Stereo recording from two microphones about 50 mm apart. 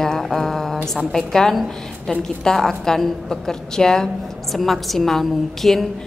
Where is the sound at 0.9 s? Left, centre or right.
Centre.